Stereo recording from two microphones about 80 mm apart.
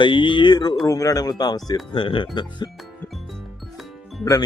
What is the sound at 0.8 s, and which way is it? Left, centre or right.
Speech, left.